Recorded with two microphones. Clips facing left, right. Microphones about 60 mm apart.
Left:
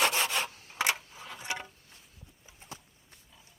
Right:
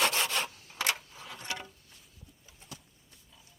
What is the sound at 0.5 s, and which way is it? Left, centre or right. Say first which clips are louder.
Rub: left 2 dB; left.